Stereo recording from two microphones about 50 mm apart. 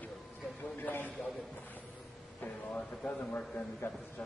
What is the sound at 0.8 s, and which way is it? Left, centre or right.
Speech, left.